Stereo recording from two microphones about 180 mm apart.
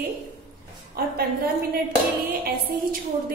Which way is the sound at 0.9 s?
55° right (ahead or behind).